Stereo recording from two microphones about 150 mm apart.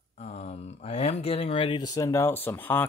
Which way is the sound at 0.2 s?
45° left (ahead or behind).